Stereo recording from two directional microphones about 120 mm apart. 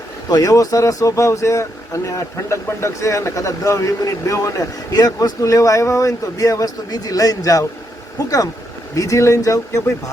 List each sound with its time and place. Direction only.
0.3 s speech: 30° left (ahead or behind)